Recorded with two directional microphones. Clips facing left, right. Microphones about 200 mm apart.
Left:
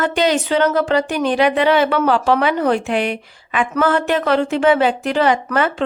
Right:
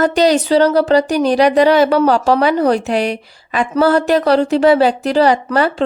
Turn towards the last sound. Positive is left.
turn(degrees=-35)  # may be behind; listen again after turning